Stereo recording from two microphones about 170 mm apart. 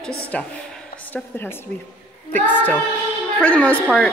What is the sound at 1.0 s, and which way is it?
A woman's voice, 10° left (ahead or behind).